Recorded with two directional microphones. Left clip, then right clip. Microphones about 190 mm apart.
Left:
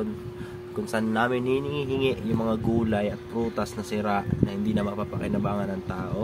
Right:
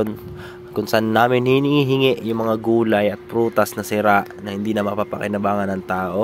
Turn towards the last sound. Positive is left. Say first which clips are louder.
# right 10 dB
turn(degrees=-55)  # may be behind; listen again after turning